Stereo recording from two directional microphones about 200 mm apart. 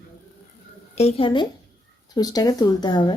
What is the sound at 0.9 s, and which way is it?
Speech, 30° left (ahead or behind).